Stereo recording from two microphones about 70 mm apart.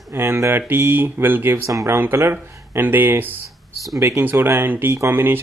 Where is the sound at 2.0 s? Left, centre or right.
Right.